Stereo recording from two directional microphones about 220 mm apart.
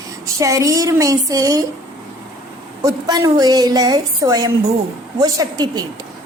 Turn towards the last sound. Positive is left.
turn(degrees=-15)  # may be behind; listen again after turning